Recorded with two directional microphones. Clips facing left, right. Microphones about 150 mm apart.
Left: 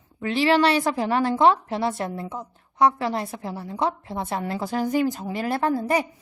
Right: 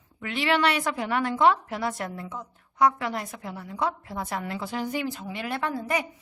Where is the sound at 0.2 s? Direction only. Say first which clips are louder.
Left 5 dB; 30° left (ahead or behind).